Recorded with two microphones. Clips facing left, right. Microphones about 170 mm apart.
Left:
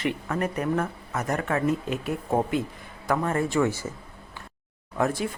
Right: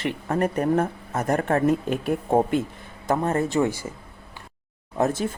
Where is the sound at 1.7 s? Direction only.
50° right (ahead or behind).